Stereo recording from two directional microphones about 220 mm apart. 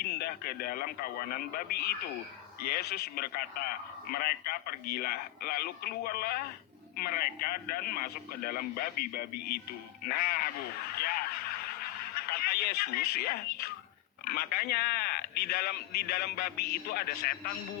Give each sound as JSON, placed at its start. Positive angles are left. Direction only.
{"t": 0.0, "sound": "radio", "side_deg": 45}
{"t": 1.3, "sound": "a man's voice", "side_deg": 45}
{"t": 10.9, "sound": "a sound", "side_deg": 45}
{"t": 12.1, "sound": "a man's voice", "side_deg": 45}